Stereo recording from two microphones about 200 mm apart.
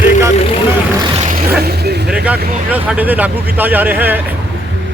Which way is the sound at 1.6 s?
55° right (ahead or behind).